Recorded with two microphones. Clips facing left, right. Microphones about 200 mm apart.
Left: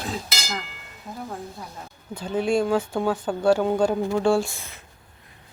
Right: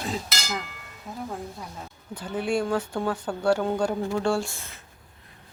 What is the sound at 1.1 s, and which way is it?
Speech, centre (ahead or behind).